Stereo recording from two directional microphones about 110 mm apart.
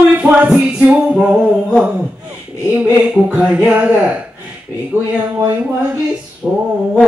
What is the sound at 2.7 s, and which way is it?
Music, 10° right (ahead or behind).